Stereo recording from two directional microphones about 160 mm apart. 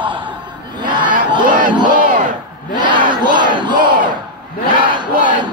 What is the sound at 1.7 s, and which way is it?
Crowd, 30° right (ahead or behind).